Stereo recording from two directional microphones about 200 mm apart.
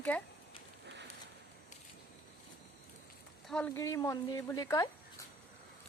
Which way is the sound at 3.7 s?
15° left (ahead or behind).